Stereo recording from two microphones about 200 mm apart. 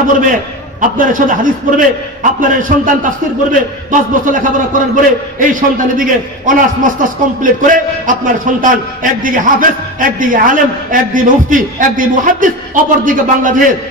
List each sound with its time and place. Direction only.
0.3 s a man's voice: 40° right (ahead or behind)